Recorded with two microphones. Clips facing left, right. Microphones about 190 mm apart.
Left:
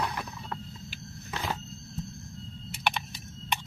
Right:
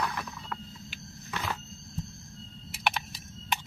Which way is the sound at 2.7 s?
Centre (ahead or behind).